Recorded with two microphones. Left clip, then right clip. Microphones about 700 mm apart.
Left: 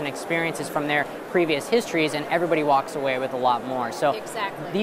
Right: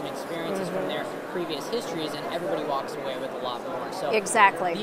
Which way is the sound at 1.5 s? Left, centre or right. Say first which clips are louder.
Left 7 dB; left.